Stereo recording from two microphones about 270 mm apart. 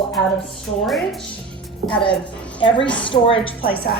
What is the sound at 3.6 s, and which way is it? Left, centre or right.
Speech, left.